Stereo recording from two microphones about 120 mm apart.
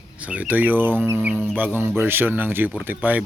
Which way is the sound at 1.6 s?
15° right (ahead or behind).